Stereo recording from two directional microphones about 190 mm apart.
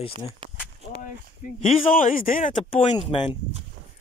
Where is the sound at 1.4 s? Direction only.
45° left (ahead or behind).